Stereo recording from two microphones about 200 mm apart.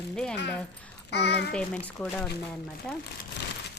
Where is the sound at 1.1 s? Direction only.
60° left (ahead or behind).